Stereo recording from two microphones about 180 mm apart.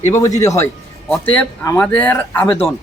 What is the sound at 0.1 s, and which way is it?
Speech, 15° left (ahead or behind).